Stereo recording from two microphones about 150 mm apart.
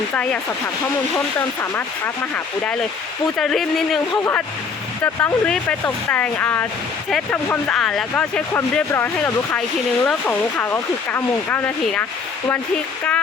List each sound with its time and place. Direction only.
0.1 s speech: 10° left (ahead or behind)
3.3 s speech: centre (ahead or behind)
4.1 s speech: 15° left (ahead or behind)